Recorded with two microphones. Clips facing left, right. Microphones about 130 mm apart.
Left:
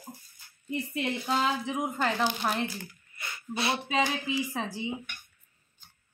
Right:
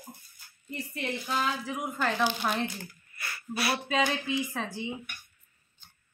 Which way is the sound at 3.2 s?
20° left (ahead or behind).